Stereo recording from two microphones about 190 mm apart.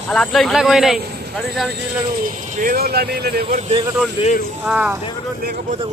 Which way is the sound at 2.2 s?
45° right (ahead or behind).